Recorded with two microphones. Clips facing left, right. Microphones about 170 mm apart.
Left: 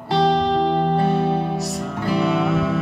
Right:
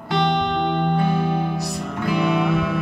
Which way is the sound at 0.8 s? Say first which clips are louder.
Left 2 dB; 30° left (ahead or behind).